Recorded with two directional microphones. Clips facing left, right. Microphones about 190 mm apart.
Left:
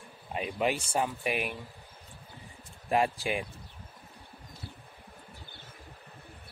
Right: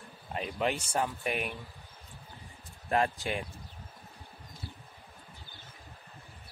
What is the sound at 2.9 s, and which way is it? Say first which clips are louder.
Speech: left 2 dB; 10° left (ahead or behind).